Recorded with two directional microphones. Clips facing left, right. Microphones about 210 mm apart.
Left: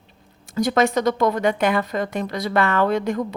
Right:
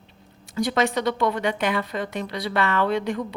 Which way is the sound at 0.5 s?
45° left (ahead or behind).